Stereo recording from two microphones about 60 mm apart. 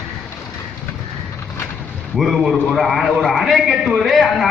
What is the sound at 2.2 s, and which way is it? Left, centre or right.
A man's voice, centre.